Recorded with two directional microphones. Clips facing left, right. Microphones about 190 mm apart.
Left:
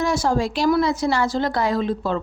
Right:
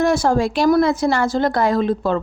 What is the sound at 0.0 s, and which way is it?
Speech, 55° right (ahead or behind).